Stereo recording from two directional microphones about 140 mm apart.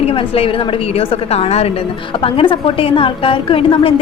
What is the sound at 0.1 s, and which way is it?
A woman's voice, 40° left (ahead or behind).